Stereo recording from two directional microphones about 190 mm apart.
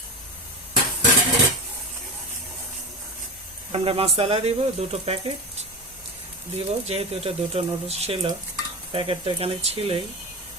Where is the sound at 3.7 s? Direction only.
30° right (ahead or behind).